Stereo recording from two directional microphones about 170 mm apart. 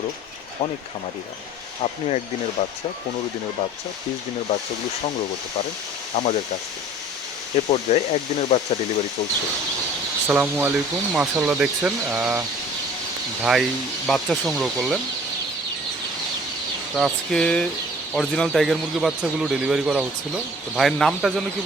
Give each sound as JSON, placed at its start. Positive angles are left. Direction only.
{"t": 1.8, "sound": "speech", "side_deg": 40}
{"t": 6.1, "sound": "speech", "side_deg": 40}
{"t": 7.7, "sound": "speech", "side_deg": 40}
{"t": 10.2, "sound": "speech", "side_deg": -10}
{"t": 13.4, "sound": "speech", "side_deg": -5}
{"t": 16.9, "sound": "speech", "side_deg": 0}